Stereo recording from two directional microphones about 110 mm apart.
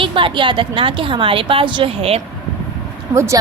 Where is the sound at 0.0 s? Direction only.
50° right (ahead or behind).